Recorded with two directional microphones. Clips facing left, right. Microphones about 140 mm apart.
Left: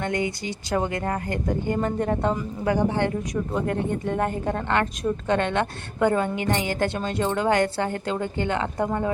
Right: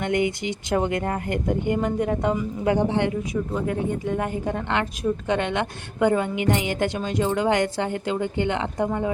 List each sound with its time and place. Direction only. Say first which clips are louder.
0.0 s speech: right 3 dB; 20° right (ahead or behind)
2.6 s speech: right 1 dB; 20° right (ahead or behind)
3.5 s speech: left 1 dB; 5° right (ahead or behind)